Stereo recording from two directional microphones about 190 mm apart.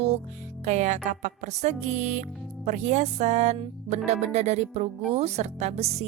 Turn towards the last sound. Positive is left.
turn(degrees=-35)  # may be behind; listen again after turning